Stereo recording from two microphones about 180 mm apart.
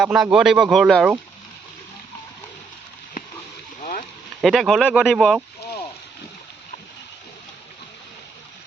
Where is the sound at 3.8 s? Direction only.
45° left (ahead or behind).